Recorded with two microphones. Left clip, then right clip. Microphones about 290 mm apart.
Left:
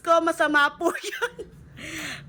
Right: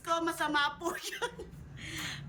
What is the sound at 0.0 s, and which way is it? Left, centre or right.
A man's voice, centre.